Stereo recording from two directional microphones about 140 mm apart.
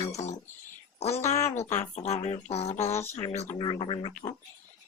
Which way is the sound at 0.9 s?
50° left (ahead or behind).